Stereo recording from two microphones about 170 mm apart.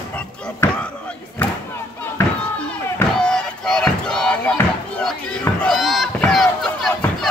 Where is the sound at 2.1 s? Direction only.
10° left (ahead or behind).